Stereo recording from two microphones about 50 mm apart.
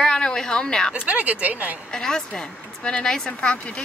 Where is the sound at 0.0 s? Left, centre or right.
Centre.